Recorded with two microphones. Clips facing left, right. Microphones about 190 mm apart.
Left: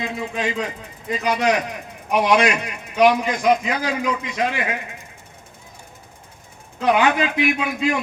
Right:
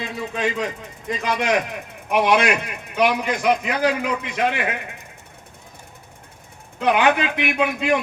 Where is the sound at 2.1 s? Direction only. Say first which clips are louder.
Even; 55° right (ahead or behind).